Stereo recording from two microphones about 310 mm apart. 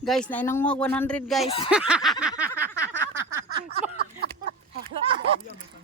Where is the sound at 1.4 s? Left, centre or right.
Centre.